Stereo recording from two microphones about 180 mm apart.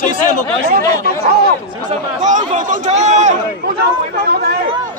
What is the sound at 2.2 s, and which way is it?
Speech, 45° right (ahead or behind).